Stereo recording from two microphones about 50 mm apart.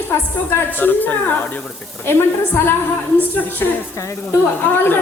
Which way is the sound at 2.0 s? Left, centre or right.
Left.